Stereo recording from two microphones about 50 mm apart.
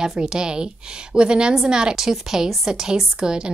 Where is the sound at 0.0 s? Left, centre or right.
Centre.